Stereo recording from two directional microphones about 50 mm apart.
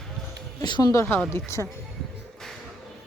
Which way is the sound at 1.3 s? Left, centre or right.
Left.